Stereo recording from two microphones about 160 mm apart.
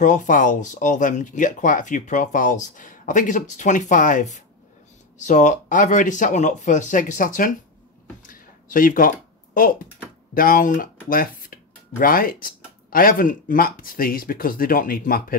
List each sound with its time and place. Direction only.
0.0 s speech: 50° left (ahead or behind)
8.2 s a sound: 60° left (ahead or behind)
10.3 s speech: 60° left (ahead or behind)